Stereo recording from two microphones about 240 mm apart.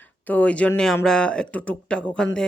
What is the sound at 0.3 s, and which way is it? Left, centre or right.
Speech, centre.